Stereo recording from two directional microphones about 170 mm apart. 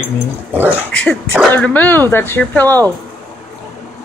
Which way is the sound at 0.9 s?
5° left (ahead or behind).